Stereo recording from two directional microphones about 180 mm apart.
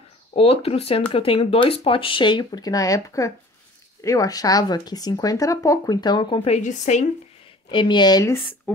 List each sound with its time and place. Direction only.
0.3 s speech: 35° left (ahead or behind)
7.7 s speech: 25° left (ahead or behind)
8.7 s speech: 10° left (ahead or behind)